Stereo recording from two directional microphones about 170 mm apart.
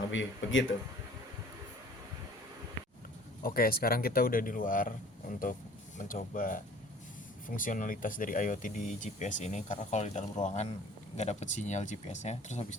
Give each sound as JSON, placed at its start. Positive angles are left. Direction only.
{"t": 0.1, "sound": "speech", "side_deg": 90}
{"t": 3.4, "sound": "speech", "side_deg": 60}